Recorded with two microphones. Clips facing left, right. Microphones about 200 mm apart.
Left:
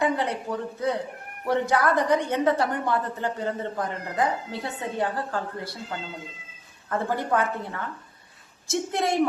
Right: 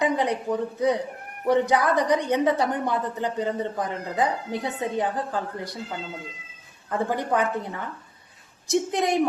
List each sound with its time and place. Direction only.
0.0 s a woman's voice: 15° right (ahead or behind)
7.1 s a woman's voice: 15° right (ahead or behind)